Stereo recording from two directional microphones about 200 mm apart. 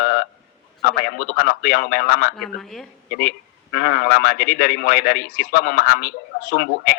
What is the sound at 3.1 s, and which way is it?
A man's voice, 50° left (ahead or behind).